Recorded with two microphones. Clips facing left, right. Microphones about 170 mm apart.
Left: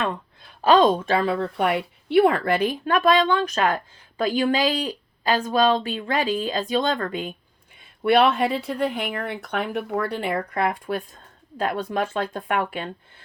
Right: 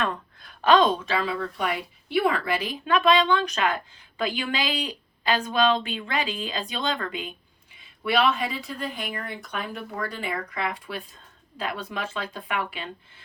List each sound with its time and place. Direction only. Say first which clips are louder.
0.0 s a sound: left 2 dB; 25° left (ahead or behind)
0.9 s a woman's voice: left 5 dB; 50° left (ahead or behind)
7.8 s a woman's voice: left 6 dB; 55° left (ahead or behind)